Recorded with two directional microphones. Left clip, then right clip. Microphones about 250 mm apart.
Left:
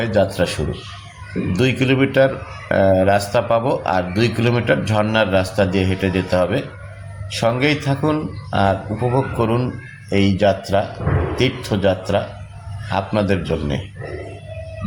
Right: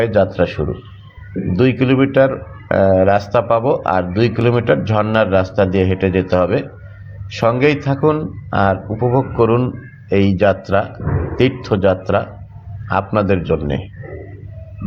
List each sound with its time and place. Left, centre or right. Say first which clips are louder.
0.0 s a man's voice: right 3 dB; centre